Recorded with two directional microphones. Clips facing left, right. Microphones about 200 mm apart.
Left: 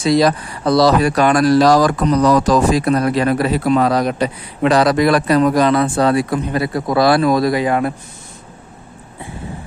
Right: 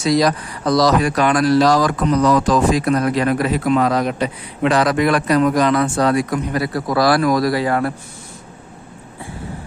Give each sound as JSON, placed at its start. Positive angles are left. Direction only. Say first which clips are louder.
{"t": 0.0, "sound": "speech", "louder": "left 2 dB", "side_deg": 30}